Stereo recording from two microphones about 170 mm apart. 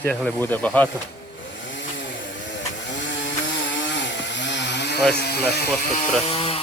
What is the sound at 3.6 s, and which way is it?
Chainsaw, 90° left.